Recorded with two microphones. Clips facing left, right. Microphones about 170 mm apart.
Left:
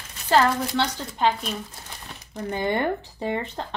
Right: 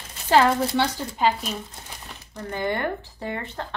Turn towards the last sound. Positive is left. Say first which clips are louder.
# left 4 dB
turn(degrees=20)  # may be behind; listen again after turning